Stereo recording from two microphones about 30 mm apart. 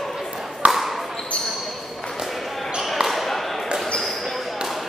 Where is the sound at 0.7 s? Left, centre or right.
Centre.